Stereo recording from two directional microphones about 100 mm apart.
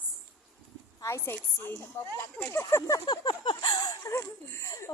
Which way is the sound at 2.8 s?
40° left (ahead or behind).